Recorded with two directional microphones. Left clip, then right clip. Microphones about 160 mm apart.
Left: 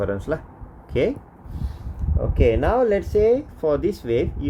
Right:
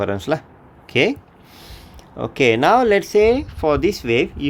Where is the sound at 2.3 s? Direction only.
40° right (ahead or behind).